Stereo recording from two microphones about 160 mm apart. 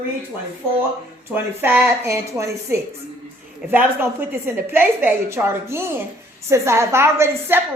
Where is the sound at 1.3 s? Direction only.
10° right (ahead or behind).